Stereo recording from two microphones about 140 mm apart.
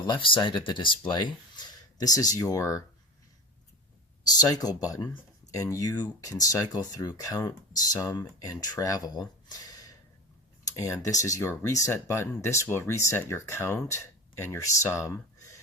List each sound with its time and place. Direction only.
0.0 s speech: 35° left (ahead or behind)
4.4 s speech: 30° left (ahead or behind)
9.6 s gasp: 25° left (ahead or behind)
10.8 s speech: 20° left (ahead or behind)